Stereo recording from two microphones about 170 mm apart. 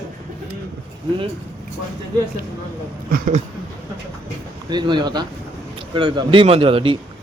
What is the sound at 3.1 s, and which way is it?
Speech, 55° right (ahead or behind).